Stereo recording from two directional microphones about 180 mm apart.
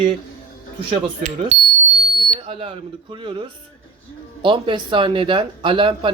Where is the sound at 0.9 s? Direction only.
40° right (ahead or behind).